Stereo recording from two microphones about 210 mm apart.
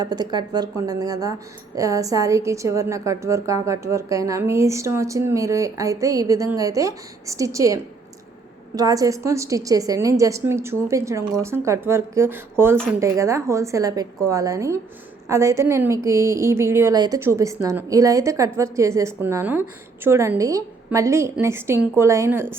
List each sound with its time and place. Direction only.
0.0 s speech: 20° right (ahead or behind)